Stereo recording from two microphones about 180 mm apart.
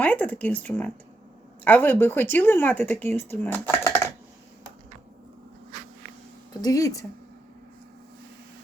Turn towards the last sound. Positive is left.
turn(degrees=20)  # may be behind; listen again after turning